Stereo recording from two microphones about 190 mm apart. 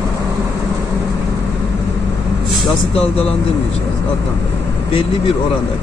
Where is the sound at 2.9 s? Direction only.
30° left (ahead or behind).